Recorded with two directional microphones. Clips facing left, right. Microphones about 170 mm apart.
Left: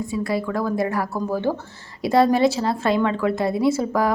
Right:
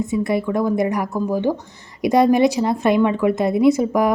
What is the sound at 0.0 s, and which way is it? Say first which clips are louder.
A woman's voice: right 4 dB; 20° right (ahead or behind).